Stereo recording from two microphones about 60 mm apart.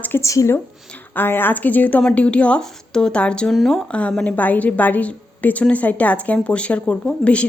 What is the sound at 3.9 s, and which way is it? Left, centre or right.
Speech, left.